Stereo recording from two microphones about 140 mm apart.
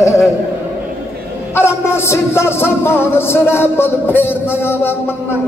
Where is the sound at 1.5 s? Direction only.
20° left (ahead or behind).